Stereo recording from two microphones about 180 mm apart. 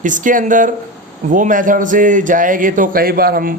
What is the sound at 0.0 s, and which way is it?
Speech, 45° right (ahead or behind).